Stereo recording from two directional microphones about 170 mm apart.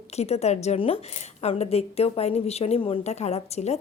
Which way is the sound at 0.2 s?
40° left (ahead or behind).